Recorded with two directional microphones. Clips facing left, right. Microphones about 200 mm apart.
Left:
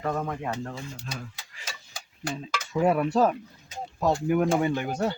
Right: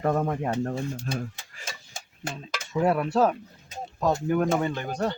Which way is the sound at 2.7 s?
Centre (ahead or behind).